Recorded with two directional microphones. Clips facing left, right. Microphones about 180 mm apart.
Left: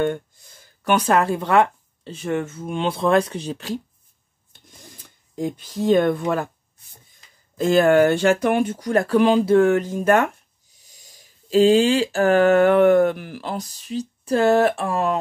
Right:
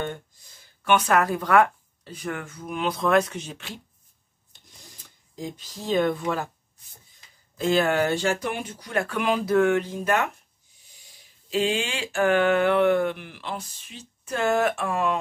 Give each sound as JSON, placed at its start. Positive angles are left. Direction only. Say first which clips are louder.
{"t": 0.8, "sound": "speech", "louder": "left 3 dB", "side_deg": 30}
{"t": 5.3, "sound": "speech", "louder": "left 9 dB", "side_deg": 55}
{"t": 7.5, "sound": "speech", "louder": "left 7 dB", "side_deg": 45}
{"t": 10.9, "sound": "a sound", "louder": "left 4 dB", "side_deg": 40}